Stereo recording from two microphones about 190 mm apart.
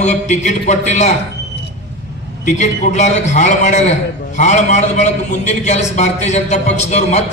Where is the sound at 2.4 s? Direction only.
40° left (ahead or behind).